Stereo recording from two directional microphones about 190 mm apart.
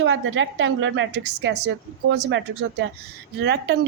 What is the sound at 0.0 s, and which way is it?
A woman's voice, 80° right.